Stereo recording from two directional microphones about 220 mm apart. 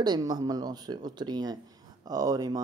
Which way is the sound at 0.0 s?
20° right (ahead or behind).